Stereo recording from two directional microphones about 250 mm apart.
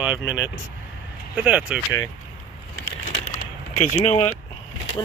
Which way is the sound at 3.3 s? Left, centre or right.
Left.